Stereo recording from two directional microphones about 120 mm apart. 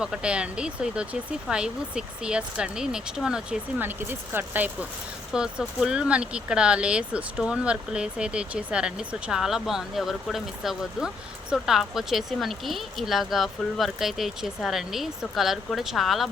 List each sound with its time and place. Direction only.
0.0 s speech: 10° right (ahead or behind)
3.8 s speech: 15° right (ahead or behind); by 16.3 s centre (ahead or behind)